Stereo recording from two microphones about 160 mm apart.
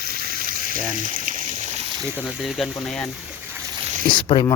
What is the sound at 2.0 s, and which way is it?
Speech, 10° right (ahead or behind).